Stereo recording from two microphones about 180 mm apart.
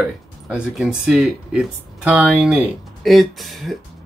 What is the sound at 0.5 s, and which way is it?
Speech, 5° right (ahead or behind).